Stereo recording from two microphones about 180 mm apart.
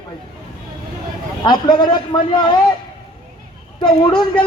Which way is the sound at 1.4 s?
25° left (ahead or behind).